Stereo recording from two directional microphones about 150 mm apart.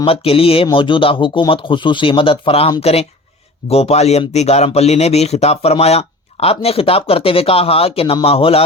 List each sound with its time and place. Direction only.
0.0 s speech: 40° left (ahead or behind)